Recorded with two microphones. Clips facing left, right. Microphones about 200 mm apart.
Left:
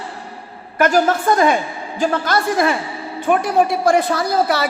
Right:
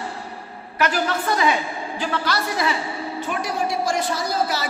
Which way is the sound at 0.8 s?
45° left (ahead or behind).